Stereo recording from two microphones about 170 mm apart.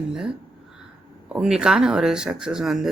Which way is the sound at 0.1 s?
5° right (ahead or behind).